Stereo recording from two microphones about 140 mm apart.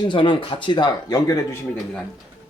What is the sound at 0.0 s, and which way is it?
Speech, 35° left (ahead or behind).